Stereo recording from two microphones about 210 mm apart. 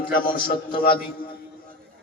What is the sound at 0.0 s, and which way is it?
Speech, 20° left (ahead or behind).